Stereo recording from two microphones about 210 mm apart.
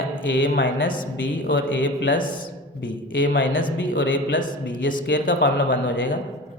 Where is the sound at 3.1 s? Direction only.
65° left (ahead or behind).